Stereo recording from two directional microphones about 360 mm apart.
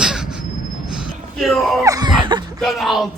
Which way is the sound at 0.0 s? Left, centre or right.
Centre.